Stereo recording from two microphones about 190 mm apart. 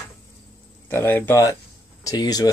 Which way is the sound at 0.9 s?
10° left (ahead or behind).